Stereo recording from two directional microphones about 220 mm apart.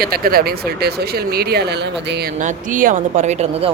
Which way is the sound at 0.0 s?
45° right (ahead or behind).